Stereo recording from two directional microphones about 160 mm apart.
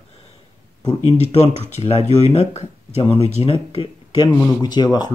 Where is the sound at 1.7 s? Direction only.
40° left (ahead or behind).